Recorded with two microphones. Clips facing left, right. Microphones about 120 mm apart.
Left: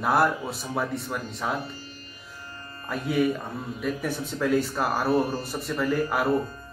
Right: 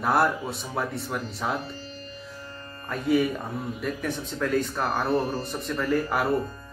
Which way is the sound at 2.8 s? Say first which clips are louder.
Right 1 dB; centre (ahead or behind).